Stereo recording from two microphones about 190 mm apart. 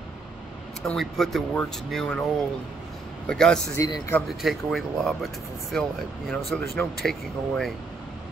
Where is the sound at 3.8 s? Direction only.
20° left (ahead or behind).